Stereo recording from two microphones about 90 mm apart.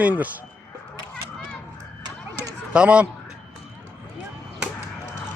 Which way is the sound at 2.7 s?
15° right (ahead or behind).